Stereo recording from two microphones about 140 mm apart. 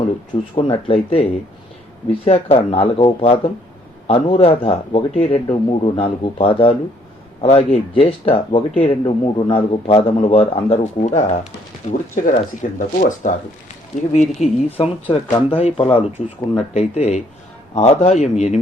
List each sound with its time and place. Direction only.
0.5 s speech: 40° left (ahead or behind)
11.0 s speech: 55° left (ahead or behind)
11.9 s speech: 65° left (ahead or behind)